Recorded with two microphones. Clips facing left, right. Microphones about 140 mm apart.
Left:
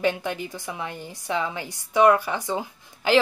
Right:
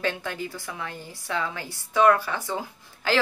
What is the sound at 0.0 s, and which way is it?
A woman's voice, 15° left (ahead or behind).